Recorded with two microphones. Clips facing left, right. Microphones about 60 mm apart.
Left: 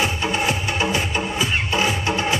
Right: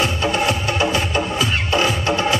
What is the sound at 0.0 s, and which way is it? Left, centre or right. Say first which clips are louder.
Music: right 2 dB; centre.